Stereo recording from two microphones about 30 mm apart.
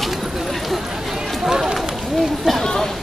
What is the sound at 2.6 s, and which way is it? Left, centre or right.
Chatter, left.